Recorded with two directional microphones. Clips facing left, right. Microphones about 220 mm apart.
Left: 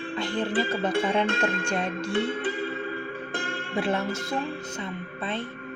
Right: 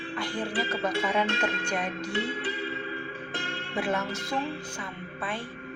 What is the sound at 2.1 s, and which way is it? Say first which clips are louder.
Music: left 6 dB; 50° left (ahead or behind).